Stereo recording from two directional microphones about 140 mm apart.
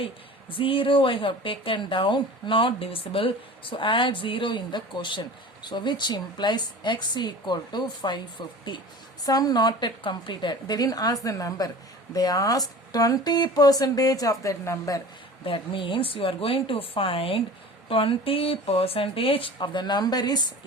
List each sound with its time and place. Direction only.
0.5 s speech: 40° left (ahead or behind); by 15.0 s 20° left (ahead or behind)
15.4 s speech: 40° left (ahead or behind)